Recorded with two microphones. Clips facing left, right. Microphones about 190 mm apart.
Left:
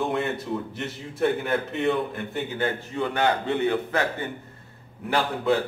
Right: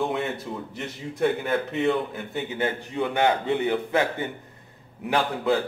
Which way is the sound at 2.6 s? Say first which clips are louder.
Right 1 dB; 15° right (ahead or behind).